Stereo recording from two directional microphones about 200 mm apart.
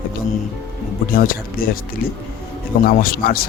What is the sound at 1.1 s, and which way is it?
Speech, 45° left (ahead or behind).